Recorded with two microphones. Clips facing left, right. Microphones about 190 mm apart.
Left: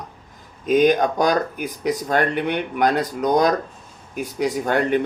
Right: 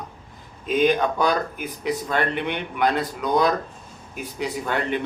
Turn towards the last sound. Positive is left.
turn(degrees=45)  # may be behind; listen again after turning